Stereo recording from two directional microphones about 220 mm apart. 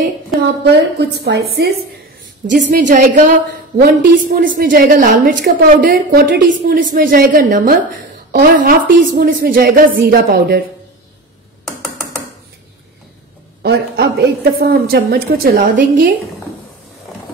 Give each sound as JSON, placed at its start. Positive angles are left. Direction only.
{"t": 0.7, "sound": "a woman's voice", "side_deg": -50}
{"t": 2.4, "sound": "a woman's voice", "side_deg": -35}
{"t": 13.6, "sound": "a woman's voice", "side_deg": -45}